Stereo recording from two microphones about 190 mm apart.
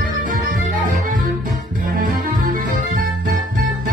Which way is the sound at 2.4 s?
45° right (ahead or behind).